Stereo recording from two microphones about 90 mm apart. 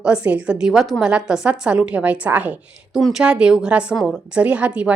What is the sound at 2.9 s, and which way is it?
A woman's voice, 5° right (ahead or behind).